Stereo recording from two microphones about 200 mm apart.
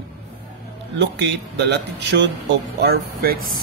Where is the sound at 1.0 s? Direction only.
60° right (ahead or behind).